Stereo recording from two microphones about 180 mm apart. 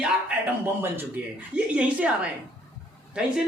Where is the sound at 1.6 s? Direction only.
5° right (ahead or behind).